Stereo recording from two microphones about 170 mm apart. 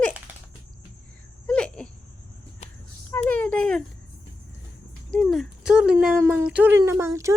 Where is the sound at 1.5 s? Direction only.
5° left (ahead or behind).